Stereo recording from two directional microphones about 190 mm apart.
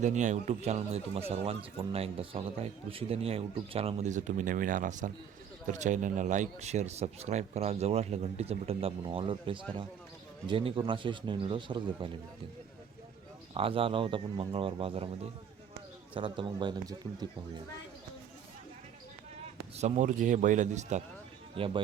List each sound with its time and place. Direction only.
0.0 s a man's voice: 40° right (ahead or behind)
13.5 s speech: 30° right (ahead or behind)
19.7 s a man's voice: 40° right (ahead or behind)
21.5 s speech: 30° right (ahead or behind)